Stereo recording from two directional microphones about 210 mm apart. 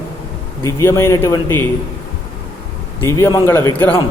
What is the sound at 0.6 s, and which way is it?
Speech, 10° left (ahead or behind).